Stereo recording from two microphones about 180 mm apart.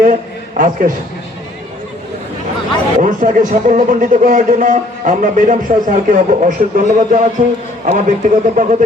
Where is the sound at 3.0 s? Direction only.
45° right (ahead or behind).